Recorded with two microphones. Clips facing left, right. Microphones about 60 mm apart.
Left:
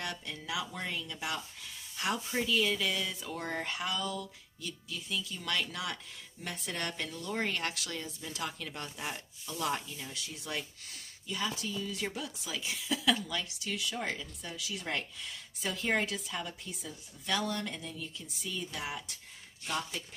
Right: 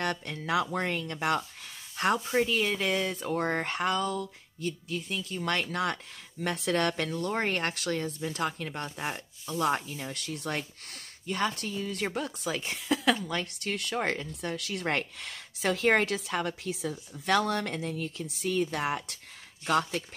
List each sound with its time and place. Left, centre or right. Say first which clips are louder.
0.0 s speech: right 7 dB; right
6.4 s speech: right 10 dB; right
7.1 s speech: right 5 dB; right